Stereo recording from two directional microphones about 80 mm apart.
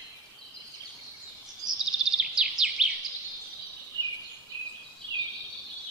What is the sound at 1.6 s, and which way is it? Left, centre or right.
Bird vocalization, right.